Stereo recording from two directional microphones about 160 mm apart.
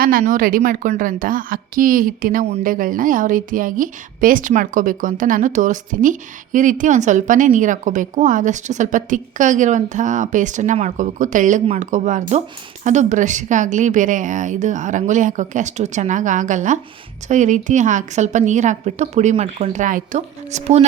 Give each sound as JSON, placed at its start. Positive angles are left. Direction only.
{"t": 0.0, "sound": "a woman's voice", "side_deg": -65}